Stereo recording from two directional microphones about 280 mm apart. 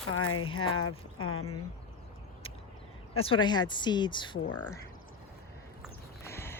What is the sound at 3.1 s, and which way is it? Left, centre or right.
Speech, centre.